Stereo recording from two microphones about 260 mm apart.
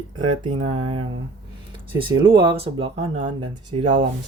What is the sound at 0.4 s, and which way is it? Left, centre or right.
Speech, right.